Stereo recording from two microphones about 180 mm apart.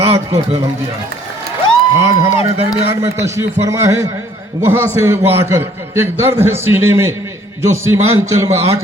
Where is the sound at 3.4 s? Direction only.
15° right (ahead or behind).